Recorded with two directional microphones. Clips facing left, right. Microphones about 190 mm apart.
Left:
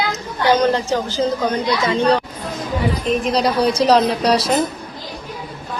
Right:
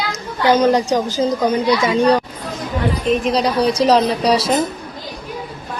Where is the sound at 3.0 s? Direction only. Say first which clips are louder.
Right 2 dB; centre (ahead or behind).